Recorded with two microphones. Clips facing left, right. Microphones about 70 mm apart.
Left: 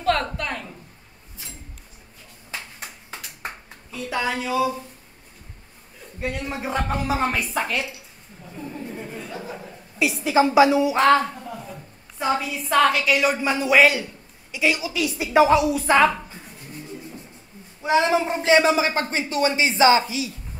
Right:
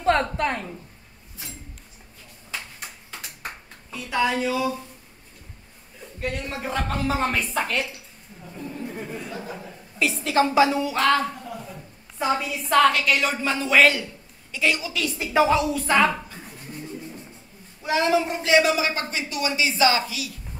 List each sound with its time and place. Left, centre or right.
0.0 s a sound: right
4.1 s speech: centre
6.1 s a woman's voice: centre
9.3 s chuckle: centre
11.0 s a man's voice: left
12.4 s a woman's voice: centre
17.8 s a man's voice: left